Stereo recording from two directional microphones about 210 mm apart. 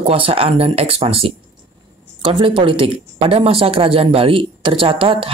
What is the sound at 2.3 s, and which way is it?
Speech, 25° right (ahead or behind).